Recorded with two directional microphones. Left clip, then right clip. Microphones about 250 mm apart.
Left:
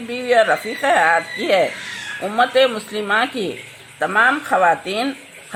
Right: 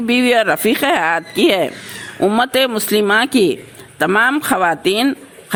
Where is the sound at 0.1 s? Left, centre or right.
Right.